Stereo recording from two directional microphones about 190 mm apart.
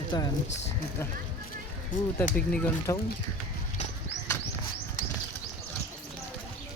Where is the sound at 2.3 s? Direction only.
5° left (ahead or behind).